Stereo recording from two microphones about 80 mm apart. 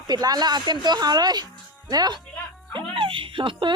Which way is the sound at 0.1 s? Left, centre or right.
Right.